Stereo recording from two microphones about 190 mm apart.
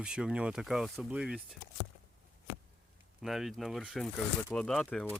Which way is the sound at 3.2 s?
Centre (ahead or behind).